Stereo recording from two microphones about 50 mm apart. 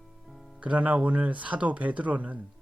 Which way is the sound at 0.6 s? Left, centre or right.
Right.